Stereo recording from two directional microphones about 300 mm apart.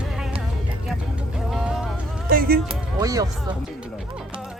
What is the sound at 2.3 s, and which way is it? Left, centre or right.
Music, right.